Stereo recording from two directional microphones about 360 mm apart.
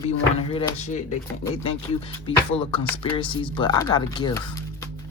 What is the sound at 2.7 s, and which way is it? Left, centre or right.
Speech, centre.